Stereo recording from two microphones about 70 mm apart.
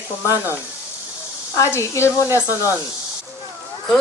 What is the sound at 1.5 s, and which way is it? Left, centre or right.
Speech, left.